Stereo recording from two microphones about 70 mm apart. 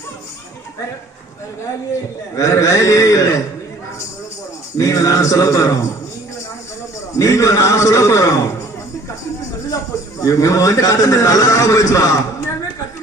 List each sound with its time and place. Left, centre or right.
2.3 s a man's voice: left
4.8 s a man's voice: left
7.2 s a man's voice: left
9.7 s a man's voice: left